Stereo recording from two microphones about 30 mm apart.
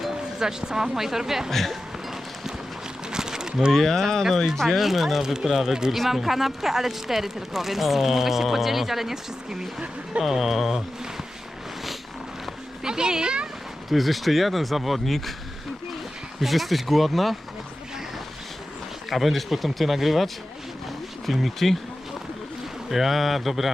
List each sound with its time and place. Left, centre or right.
0.3 s speech: right
1.5 s speech: centre
3.1 s a sound: right
3.7 s speech: centre
4.8 s speech: centre
5.4 s speech: centre
12.8 s speech: right
13.9 s speech: centre
16.4 s speech: centre
19.1 s speech: centre
21.6 s speech: centre
22.9 s speech: centre